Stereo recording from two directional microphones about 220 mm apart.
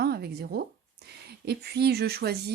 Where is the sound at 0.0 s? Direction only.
45° right (ahead or behind).